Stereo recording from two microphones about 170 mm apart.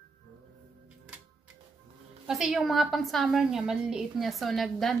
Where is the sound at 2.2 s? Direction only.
5° right (ahead or behind).